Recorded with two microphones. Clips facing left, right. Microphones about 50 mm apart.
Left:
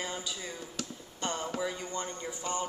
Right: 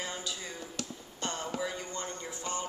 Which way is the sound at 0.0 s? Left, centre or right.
Centre.